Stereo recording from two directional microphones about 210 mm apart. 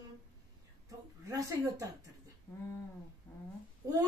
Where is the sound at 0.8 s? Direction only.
15° right (ahead or behind).